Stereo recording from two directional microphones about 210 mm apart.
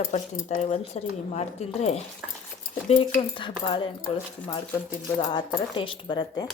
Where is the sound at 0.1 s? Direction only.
35° left (ahead or behind).